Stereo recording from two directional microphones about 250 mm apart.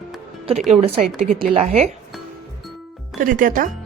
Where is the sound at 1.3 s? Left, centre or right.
Right.